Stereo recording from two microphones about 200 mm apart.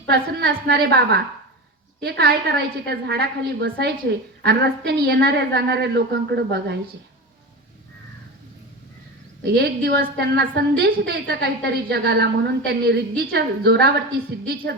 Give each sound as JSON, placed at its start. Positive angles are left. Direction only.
{"t": 0.1, "sound": "a woman's voice", "side_deg": -55}
{"t": 9.5, "sound": "a woman's voice", "side_deg": -55}